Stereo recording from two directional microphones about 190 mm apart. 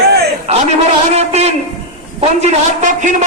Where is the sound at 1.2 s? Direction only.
35° right (ahead or behind).